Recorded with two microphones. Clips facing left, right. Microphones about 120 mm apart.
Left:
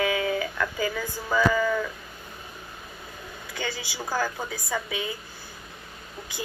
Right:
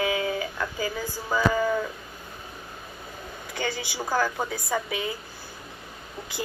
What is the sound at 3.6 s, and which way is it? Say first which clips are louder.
Speech: right 3 dB; 45° right (ahead or behind).